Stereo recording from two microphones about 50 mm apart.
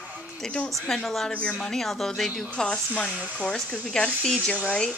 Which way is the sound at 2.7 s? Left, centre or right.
Left.